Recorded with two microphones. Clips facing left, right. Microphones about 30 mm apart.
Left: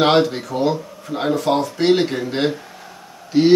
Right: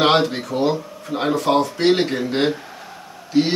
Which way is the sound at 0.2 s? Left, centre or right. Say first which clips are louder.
Left 1 dB; centre.